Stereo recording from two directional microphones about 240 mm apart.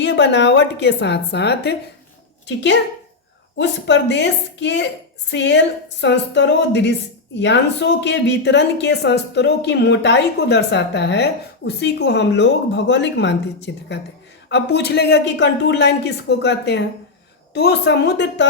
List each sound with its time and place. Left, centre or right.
0.0 s speech: left
3.6 s speech: left